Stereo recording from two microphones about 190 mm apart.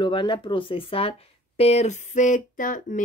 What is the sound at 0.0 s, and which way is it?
Speech, 25° left (ahead or behind).